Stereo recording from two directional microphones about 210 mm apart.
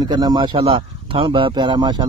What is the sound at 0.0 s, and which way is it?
Speech, 20° right (ahead or behind).